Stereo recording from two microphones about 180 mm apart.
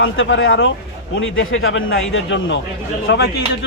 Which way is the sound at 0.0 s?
90° left.